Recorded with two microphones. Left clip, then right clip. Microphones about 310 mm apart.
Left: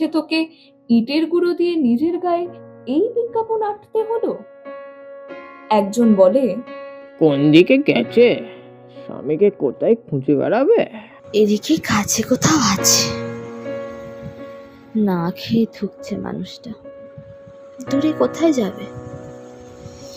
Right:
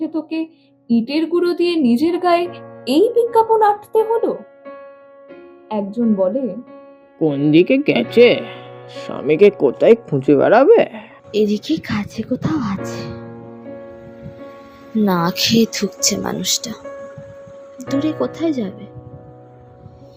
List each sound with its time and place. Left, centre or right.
0.0 s speech: left
0.9 s speech: centre; by 2.6 s right
2.8 s speech: right
3.3 s speech: right
4.0 s speech: centre
5.6 s speech: left
5.9 s speech: left
7.2 s speech: centre
9.0 s speech: right
10.1 s speech: right; by 11.0 s centre
11.3 s speech: centre; by 12.4 s left
12.4 s music: left; by 14.3 s centre
14.9 s speech: centre; by 16.7 s right
17.7 s speech: centre; by 18.9 s left